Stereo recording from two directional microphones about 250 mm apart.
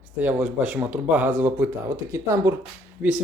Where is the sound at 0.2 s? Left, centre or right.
Centre.